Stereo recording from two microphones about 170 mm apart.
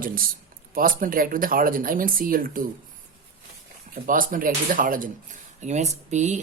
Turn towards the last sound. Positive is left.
turn(degrees=-45)  # may be behind; listen again after turning